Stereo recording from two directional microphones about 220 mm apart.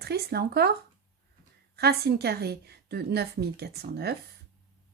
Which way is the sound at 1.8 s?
45° right (ahead or behind).